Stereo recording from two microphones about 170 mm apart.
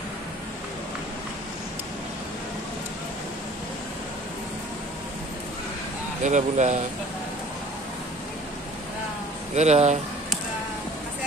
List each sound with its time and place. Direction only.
6.2 s speech: 45° right (ahead or behind)
9.6 s speech: 40° right (ahead or behind)